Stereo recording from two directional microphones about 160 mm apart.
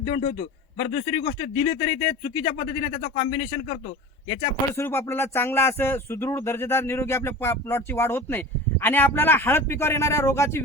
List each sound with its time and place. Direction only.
0.0 s a man's voice: 55° left (ahead or behind)
1.5 s speech: 30° left (ahead or behind)
4.7 s speech: 15° left (ahead or behind)